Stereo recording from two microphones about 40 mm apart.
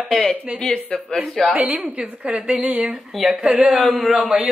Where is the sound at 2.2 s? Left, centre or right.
Right.